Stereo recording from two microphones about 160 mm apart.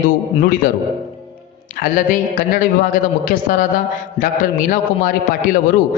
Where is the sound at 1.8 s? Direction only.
55° left (ahead or behind).